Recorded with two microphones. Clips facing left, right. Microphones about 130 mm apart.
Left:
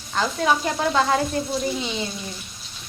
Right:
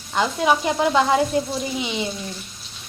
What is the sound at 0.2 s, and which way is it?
Speech, 15° right (ahead or behind).